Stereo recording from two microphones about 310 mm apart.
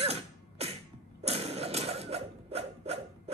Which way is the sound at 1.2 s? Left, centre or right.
Centre.